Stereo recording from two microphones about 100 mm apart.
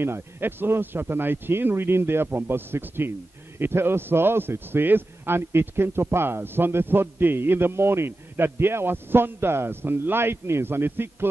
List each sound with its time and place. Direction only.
0.0 s a man's voice: 20° right (ahead or behind)